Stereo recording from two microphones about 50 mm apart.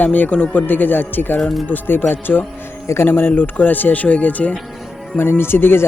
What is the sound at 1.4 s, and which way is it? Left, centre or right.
Speech, centre.